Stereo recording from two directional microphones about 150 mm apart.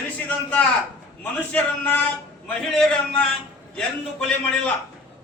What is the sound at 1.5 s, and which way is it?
Speech, 10° left (ahead or behind).